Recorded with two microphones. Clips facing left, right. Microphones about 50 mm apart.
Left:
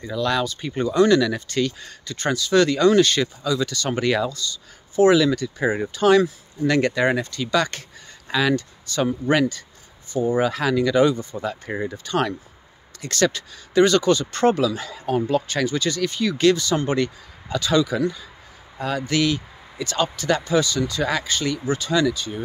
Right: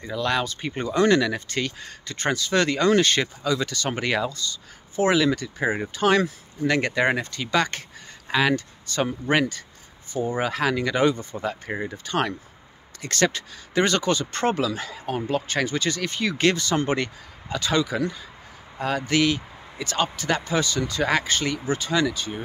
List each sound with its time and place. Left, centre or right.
0.0 s speech: right